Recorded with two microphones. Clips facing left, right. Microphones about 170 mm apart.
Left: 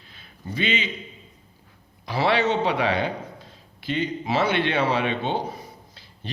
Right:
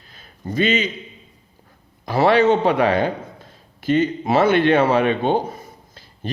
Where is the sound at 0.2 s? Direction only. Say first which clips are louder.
Right 8 dB; 45° right (ahead or behind).